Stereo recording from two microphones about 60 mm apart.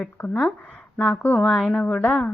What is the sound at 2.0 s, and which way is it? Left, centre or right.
Speech, left.